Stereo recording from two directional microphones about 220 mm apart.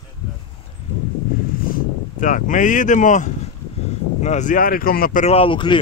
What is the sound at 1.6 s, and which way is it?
Speech, 40° left (ahead or behind).